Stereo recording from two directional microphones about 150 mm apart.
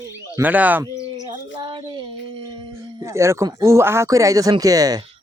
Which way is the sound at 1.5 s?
30° right (ahead or behind).